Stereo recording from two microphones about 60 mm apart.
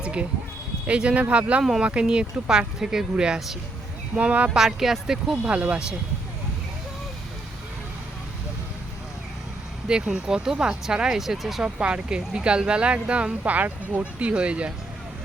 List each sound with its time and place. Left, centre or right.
0.0 s a sound: centre
0.9 s speech: centre
4.1 s speech: right
4.5 s speech: centre
5.5 s speech: right
9.9 s speech: centre
11.6 s speech: centre